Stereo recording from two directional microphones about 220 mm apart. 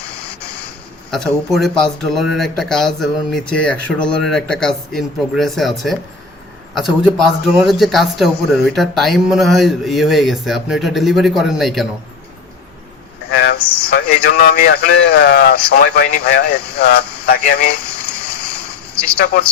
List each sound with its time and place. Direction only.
1.1 s a man's voice: centre (ahead or behind)
13.3 s vehicle: 50° left (ahead or behind)
13.9 s speech: 50° left (ahead or behind)
17.8 s frying: 5° left (ahead or behind)
19.2 s speech: 45° left (ahead or behind)